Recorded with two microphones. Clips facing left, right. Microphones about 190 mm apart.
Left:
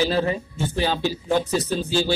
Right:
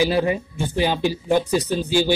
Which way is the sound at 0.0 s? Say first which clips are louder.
Right 2 dB; 15° right (ahead or behind).